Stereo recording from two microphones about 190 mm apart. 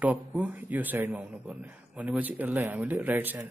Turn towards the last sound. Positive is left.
turn(degrees=-10)  # may be behind; listen again after turning